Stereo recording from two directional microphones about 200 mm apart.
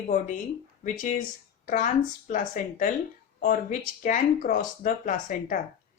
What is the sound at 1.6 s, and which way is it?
Speech, 40° left (ahead or behind).